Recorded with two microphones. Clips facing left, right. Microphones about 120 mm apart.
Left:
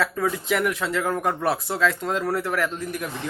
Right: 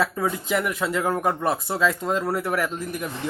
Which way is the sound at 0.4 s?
Centre (ahead or behind).